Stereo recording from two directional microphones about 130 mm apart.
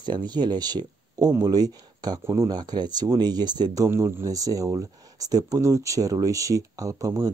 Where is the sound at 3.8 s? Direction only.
20° right (ahead or behind).